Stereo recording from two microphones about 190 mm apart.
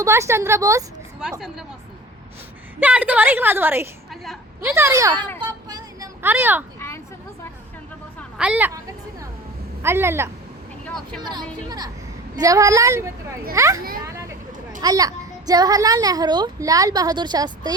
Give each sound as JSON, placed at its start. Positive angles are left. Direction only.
{"t": 0.0, "sound": "a woman's voice", "side_deg": -15}
{"t": 1.2, "sound": "a woman's voice", "side_deg": -5}
{"t": 2.8, "sound": "a woman's voice", "side_deg": -5}
{"t": 5.4, "sound": "a sound", "side_deg": -20}
{"t": 6.2, "sound": "a woman's voice", "side_deg": -10}
{"t": 6.7, "sound": "a sound", "side_deg": 15}
{"t": 8.4, "sound": "a woman's voice", "side_deg": -5}
{"t": 14.0, "sound": "a sound", "side_deg": -15}
{"t": 14.8, "sound": "a child's voice", "side_deg": -20}